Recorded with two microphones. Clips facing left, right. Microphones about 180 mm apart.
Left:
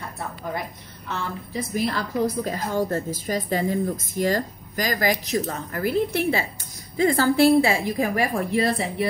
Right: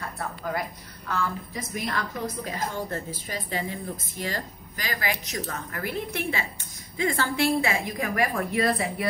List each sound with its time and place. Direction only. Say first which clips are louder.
1.0 s a woman's voice: right 1 dB; 25° left (ahead or behind)